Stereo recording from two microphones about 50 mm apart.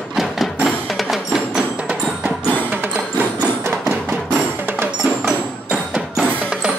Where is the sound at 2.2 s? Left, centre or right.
Right.